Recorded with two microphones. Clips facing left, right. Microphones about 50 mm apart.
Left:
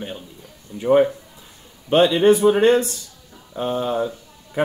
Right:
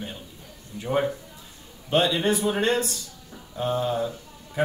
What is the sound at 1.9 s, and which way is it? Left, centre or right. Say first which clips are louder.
Speech: left 8 dB; left.